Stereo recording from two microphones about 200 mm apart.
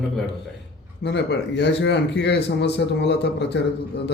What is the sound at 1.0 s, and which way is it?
Speech, 60° left (ahead or behind).